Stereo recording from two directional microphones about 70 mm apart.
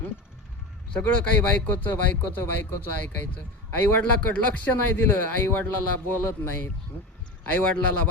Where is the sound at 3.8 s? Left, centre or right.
Left.